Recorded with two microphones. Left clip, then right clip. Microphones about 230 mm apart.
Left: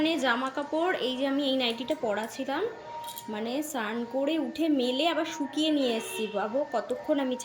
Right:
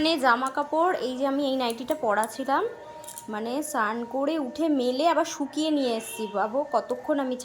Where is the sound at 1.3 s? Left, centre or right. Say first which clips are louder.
Right 4 dB; centre.